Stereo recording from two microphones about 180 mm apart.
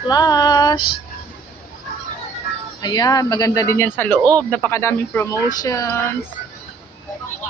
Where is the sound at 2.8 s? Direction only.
20° left (ahead or behind).